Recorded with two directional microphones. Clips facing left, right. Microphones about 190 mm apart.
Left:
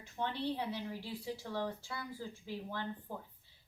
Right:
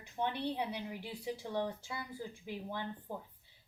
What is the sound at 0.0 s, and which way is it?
A woman's voice, 15° right (ahead or behind).